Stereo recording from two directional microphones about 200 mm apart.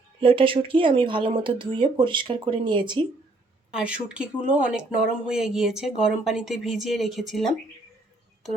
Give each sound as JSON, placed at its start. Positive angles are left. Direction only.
{"t": 0.2, "sound": "speech", "side_deg": -25}
{"t": 3.7, "sound": "speech", "side_deg": -5}